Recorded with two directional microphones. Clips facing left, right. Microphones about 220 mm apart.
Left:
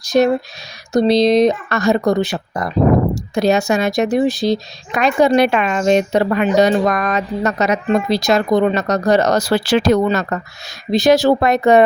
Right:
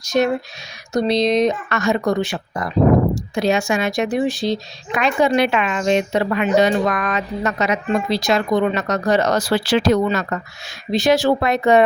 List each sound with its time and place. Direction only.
0.0 s speech: 35° left (ahead or behind)